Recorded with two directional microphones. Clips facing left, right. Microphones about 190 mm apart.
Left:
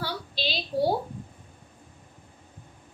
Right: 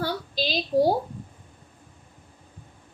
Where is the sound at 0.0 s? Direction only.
45° right (ahead or behind).